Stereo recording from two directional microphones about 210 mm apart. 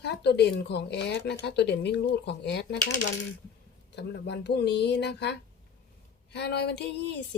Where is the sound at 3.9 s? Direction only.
55° left (ahead or behind).